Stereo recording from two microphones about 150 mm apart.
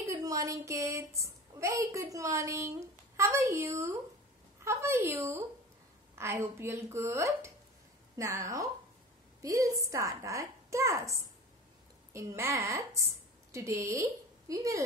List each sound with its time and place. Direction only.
0.0 s a woman's voice: 20° right (ahead or behind)